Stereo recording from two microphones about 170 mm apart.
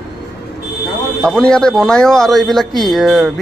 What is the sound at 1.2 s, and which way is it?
A man's voice, 5° left (ahead or behind).